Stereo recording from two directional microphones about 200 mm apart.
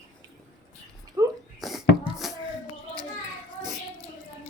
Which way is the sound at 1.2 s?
15° right (ahead or behind).